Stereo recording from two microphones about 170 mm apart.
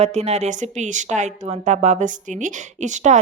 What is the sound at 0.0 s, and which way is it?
Speech, 40° right (ahead or behind).